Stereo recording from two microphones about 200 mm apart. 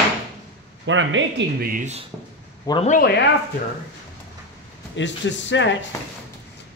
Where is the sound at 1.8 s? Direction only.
35° right (ahead or behind).